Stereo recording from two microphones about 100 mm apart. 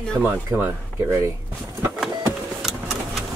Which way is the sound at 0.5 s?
25° right (ahead or behind).